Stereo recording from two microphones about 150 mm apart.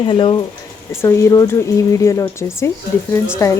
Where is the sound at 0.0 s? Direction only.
35° left (ahead or behind).